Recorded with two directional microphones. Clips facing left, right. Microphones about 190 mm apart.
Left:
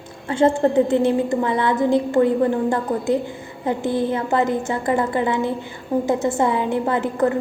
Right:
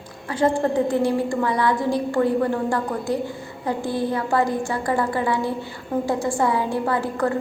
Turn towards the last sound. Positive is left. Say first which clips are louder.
# left 3 dB
turn(degrees=20)  # may be behind; listen again after turning